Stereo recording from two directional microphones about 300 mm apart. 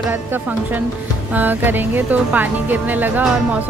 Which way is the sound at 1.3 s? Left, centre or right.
Centre.